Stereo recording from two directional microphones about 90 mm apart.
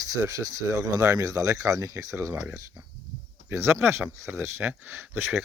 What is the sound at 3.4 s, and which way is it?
Speech, 30° right (ahead or behind).